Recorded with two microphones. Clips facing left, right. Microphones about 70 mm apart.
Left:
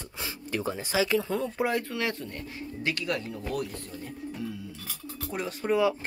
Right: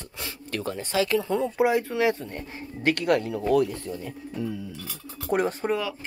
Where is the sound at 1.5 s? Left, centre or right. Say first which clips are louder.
Right 6 dB; centre; by 2.6 s right.